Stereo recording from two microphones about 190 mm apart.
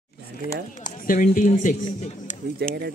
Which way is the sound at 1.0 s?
45° left (ahead or behind).